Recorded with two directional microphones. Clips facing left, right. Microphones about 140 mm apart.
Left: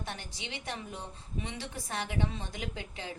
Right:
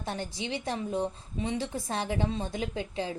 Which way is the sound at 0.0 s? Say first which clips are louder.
Right 7 dB; 25° right (ahead or behind).